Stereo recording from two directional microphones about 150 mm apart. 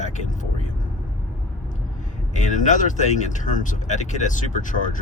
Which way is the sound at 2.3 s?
55° left (ahead or behind).